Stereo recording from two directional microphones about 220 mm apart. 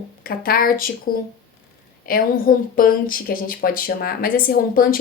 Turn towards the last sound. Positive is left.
turn(degrees=40)  # may be behind; listen again after turning